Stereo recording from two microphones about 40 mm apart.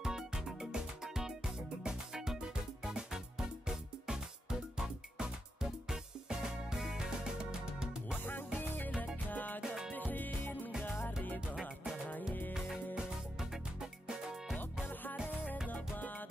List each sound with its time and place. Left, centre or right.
0.0 s music: centre
8.2 s music: left
8.5 s music: left
9.6 s music: centre
9.9 s music: left
12.9 s music: centre
15.7 s music: left